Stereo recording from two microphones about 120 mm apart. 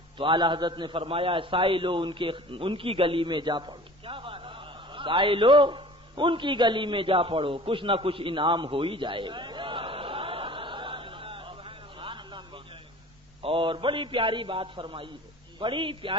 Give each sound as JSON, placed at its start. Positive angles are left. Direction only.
{"t": 0.2, "sound": "a man's voice", "side_deg": -45}